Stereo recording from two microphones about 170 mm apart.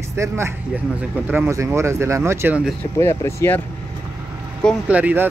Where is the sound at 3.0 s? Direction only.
15° left (ahead or behind).